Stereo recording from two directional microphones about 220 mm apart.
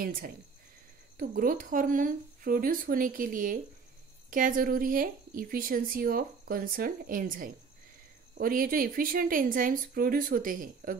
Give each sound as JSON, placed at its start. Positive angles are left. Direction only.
{"t": 0.0, "sound": "speech", "side_deg": -40}